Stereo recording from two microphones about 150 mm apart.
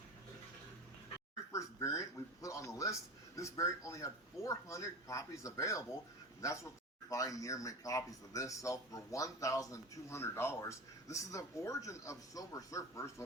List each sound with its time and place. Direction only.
1.5 s speech: 20° left (ahead or behind)